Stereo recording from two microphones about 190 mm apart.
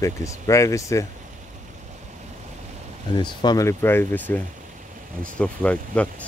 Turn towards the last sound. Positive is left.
turn(degrees=5)  # may be behind; listen again after turning